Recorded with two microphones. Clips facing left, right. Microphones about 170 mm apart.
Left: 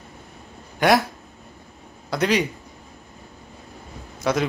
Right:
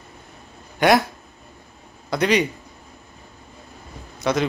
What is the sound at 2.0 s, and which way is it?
Speech, 5° left (ahead or behind).